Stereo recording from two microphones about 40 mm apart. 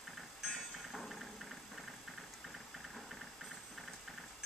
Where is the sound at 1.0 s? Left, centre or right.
Centre.